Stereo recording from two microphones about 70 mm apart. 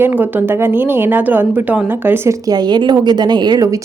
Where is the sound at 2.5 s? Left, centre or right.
Right.